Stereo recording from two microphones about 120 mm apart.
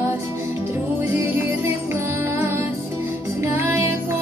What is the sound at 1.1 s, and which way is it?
Music, 20° right (ahead or behind).